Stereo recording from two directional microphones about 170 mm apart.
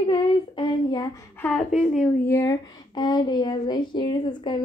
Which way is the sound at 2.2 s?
20° left (ahead or behind).